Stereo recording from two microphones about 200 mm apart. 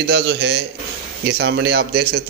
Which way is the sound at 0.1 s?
55° right (ahead or behind).